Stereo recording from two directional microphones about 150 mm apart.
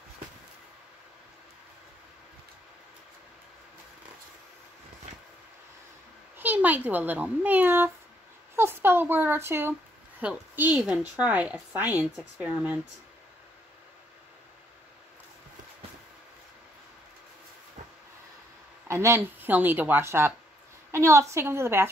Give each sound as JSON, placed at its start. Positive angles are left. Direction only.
{"t": 6.3, "sound": "a woman's voice", "side_deg": -10}
{"t": 18.9, "sound": "a woman's voice", "side_deg": -20}